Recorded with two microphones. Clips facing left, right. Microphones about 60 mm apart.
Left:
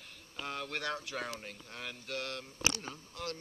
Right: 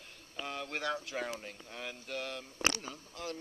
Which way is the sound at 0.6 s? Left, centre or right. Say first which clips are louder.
Right 3 dB; centre.